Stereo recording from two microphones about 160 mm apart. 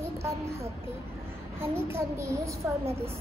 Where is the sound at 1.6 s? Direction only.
15° right (ahead or behind).